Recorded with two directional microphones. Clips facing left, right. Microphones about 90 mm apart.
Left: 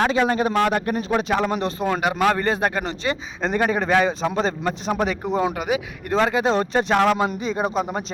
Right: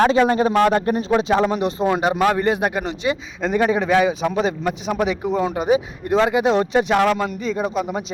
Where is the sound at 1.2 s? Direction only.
20° right (ahead or behind).